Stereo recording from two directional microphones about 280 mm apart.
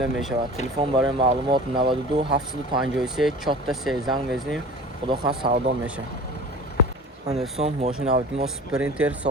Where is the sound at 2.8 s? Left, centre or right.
Centre.